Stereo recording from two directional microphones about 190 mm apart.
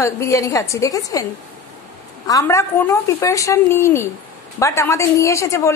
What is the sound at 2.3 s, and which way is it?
A woman's voice, 15° left (ahead or behind).